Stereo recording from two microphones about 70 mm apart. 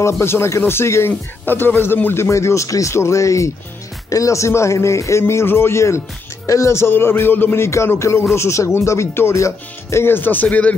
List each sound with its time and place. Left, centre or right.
0.0 s speech: left
1.4 s a man's voice: left
7.6 s speech: left